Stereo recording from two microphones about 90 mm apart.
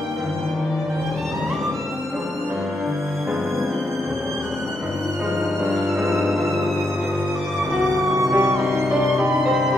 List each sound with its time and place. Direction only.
5.7 s music: centre (ahead or behind)
7.7 s music: centre (ahead or behind)
8.4 s music: 30° right (ahead or behind)
8.6 s music: centre (ahead or behind)